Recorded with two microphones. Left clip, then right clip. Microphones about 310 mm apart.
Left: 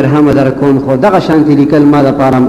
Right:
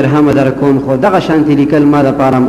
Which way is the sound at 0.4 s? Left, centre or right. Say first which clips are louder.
Left 1 dB; left.